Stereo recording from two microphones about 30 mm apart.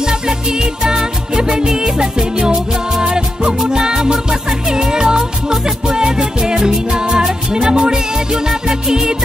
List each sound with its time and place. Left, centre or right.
0.0 s music: right